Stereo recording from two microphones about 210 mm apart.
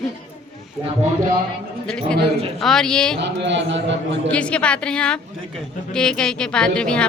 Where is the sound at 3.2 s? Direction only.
55° right (ahead or behind).